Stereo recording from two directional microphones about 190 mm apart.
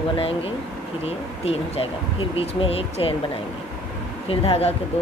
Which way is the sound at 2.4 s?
30° left (ahead or behind).